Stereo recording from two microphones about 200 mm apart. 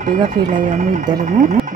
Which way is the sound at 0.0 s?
40° right (ahead or behind).